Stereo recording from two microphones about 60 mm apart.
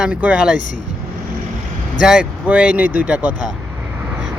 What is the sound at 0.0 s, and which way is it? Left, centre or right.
Speech, right.